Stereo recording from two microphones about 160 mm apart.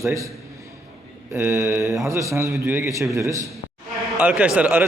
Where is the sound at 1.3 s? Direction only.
15° right (ahead or behind).